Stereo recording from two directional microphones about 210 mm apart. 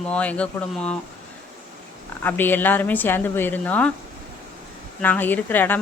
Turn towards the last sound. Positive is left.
turn(degrees=10)  # may be behind; listen again after turning